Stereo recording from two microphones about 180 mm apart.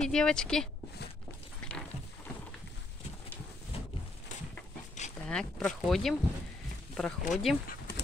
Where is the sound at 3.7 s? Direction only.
35° left (ahead or behind).